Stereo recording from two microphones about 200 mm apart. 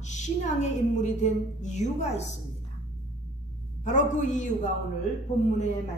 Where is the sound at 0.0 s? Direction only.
35° left (ahead or behind).